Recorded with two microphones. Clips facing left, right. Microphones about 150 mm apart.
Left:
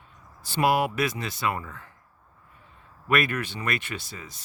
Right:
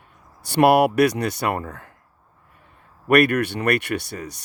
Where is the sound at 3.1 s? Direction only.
65° right (ahead or behind).